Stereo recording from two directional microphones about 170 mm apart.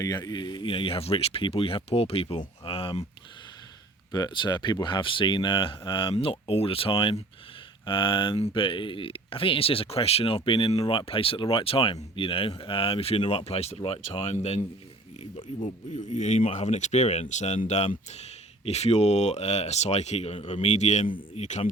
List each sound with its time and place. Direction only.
0.0 s speech: 25° left (ahead or behind)
2.6 s a sound: 35° left (ahead or behind)
4.1 s speech: 25° left (ahead or behind); by 21.7 s 40° left (ahead or behind)